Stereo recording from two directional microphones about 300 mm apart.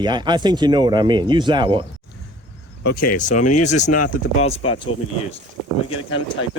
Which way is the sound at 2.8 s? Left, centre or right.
Left.